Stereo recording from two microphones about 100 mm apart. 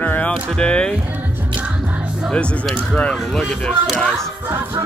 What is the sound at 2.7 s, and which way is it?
Speech, 10° left (ahead or behind).